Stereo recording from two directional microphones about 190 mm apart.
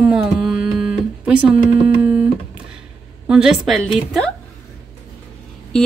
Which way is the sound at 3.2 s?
5° right (ahead or behind).